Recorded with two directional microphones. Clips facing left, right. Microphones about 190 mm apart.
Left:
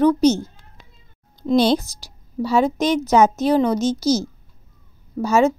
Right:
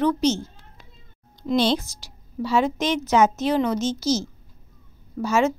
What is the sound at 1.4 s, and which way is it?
A woman's voice, 40° left (ahead or behind).